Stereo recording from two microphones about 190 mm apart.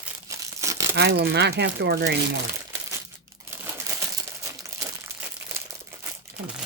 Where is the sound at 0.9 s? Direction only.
60° right (ahead or behind).